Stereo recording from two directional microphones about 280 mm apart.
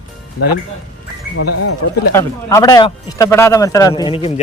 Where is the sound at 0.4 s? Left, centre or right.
Left.